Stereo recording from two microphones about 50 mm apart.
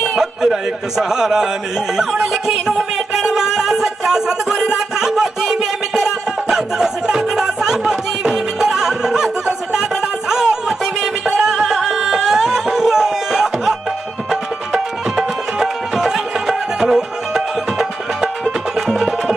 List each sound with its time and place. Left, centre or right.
0.0 s speech: centre
2.2 s music: centre